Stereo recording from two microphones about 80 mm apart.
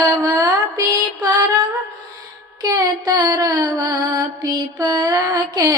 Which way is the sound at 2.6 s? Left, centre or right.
Right.